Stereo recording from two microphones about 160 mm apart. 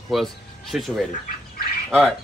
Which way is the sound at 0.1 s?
Centre (ahead or behind).